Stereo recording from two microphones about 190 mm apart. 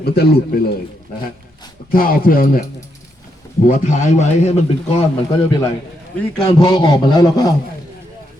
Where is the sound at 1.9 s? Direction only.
50° left (ahead or behind).